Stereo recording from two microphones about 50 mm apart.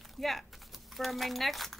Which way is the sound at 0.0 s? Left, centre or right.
Centre.